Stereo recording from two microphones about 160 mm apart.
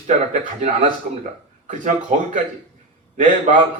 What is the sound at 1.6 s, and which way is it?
A man's voice, 50° right (ahead or behind).